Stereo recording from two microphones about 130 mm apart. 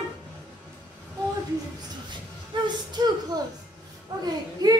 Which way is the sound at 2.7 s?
35° right (ahead or behind).